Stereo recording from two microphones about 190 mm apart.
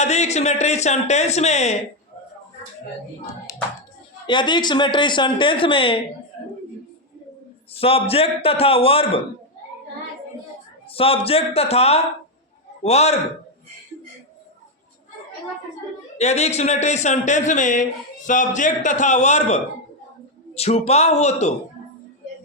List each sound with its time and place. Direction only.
0.0 s speech: 35° left (ahead or behind)
4.3 s speech: 25° left (ahead or behind)
7.8 s speech: 30° left (ahead or behind)
10.8 s speech: 30° left (ahead or behind)
16.1 s speech: 35° left (ahead or behind)